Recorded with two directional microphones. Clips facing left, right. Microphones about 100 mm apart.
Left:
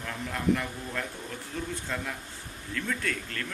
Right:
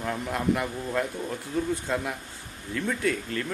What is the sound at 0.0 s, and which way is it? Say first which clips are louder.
Speech: right 3 dB; 20° right (ahead or behind).